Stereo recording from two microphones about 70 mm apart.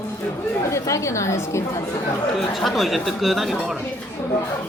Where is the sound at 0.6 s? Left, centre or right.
Left.